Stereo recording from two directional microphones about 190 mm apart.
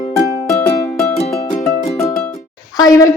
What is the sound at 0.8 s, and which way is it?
Music, 15° left (ahead or behind).